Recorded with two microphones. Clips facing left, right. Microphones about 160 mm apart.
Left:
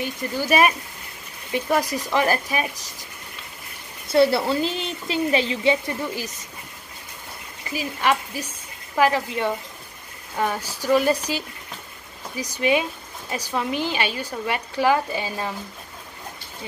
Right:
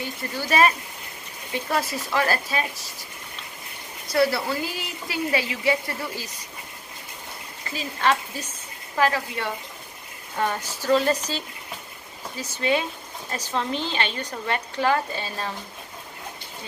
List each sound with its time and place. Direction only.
0.0 s a woman's voice: 15° left (ahead or behind)
4.1 s speech: 25° left (ahead or behind)
7.7 s a woman's voice: 15° left (ahead or behind)